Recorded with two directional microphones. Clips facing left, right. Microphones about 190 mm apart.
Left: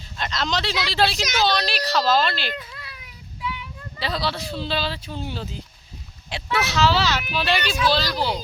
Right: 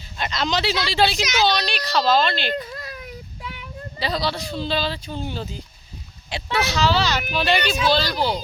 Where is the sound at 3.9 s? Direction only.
Centre (ahead or behind).